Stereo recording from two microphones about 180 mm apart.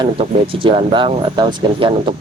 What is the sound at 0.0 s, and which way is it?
A man's voice, 30° right (ahead or behind).